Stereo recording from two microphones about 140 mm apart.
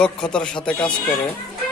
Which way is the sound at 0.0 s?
5° left (ahead or behind).